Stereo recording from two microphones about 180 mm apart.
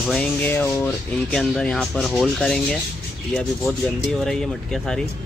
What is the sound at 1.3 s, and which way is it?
Speech, 5° left (ahead or behind).